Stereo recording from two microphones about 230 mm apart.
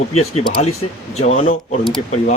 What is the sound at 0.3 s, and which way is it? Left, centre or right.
Speech, left.